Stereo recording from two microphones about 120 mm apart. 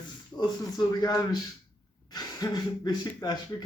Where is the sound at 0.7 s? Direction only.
35° left (ahead or behind).